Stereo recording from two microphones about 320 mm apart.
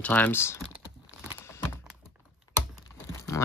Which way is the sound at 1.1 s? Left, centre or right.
Centre.